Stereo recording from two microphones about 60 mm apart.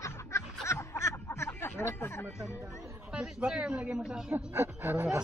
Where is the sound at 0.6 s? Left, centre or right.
Left.